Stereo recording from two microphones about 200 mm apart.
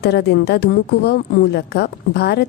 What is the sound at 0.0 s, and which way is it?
A woman's voice, 55° left (ahead or behind).